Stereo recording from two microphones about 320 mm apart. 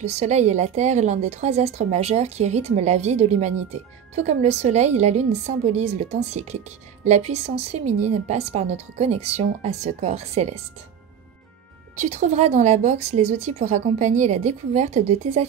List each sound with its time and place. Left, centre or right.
0.0 s a woman's voice: right
11.9 s a woman's voice: right